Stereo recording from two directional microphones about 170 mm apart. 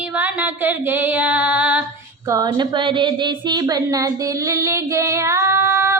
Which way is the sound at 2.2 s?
20° right (ahead or behind).